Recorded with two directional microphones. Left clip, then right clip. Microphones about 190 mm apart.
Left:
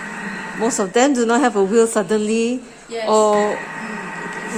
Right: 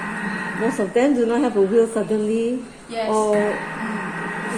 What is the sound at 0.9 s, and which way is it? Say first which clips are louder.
A woman's voice: left 3 dB; 35° left (ahead or behind).